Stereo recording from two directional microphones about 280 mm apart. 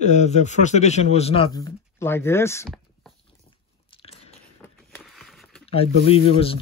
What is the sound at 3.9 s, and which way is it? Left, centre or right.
Biting, left.